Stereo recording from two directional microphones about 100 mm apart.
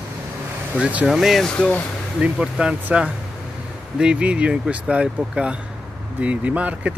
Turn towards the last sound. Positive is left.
turn(degrees=-15)  # may be behind; listen again after turning